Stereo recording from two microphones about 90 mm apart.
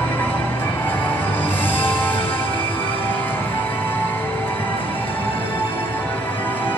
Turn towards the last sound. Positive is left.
turn(degrees=20)  # may be behind; listen again after turning